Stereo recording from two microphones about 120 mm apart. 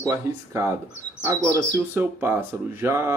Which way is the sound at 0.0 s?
25° right (ahead or behind).